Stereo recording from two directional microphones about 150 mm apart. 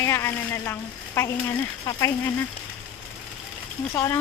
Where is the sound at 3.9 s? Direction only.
15° left (ahead or behind).